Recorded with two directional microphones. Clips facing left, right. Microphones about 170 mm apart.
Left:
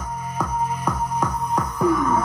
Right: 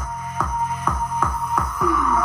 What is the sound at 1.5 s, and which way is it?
Music, 35° left (ahead or behind).